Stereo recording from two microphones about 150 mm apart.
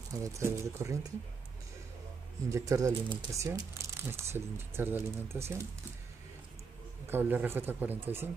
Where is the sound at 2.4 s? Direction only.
20° right (ahead or behind).